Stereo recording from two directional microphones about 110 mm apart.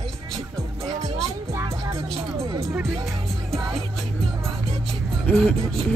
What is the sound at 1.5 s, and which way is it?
Music, 30° right (ahead or behind).